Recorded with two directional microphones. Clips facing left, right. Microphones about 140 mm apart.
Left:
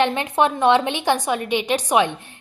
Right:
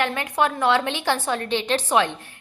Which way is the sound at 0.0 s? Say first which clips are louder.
Left 4 dB; 20° left (ahead or behind).